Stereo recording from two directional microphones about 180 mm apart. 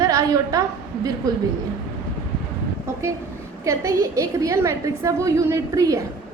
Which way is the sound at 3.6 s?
15° right (ahead or behind).